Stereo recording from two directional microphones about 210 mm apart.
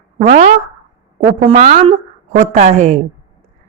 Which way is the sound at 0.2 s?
35° right (ahead or behind).